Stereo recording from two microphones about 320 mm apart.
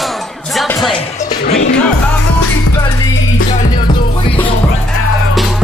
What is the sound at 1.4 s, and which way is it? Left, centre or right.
Music, left.